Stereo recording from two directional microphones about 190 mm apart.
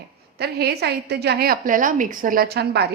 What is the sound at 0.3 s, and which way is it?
A woman's voice, 55° right (ahead or behind).